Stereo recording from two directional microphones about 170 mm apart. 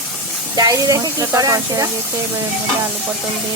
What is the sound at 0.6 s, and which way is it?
Speech, 20° right (ahead or behind).